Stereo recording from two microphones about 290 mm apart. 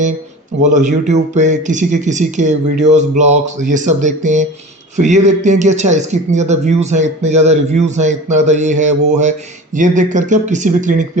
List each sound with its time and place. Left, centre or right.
0.6 s speech: right